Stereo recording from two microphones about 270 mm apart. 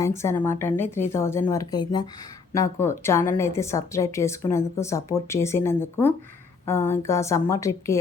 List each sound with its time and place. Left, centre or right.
0.0 s a woman's voice: centre